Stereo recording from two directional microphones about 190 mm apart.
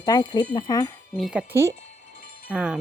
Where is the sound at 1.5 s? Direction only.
15° right (ahead or behind).